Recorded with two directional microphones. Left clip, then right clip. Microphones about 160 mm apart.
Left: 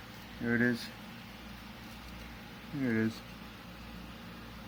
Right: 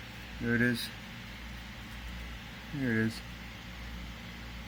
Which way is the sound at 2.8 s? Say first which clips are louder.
Right 1 dB; 20° right (ahead or behind).